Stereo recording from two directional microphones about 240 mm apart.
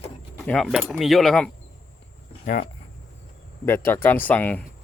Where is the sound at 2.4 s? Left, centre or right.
Left.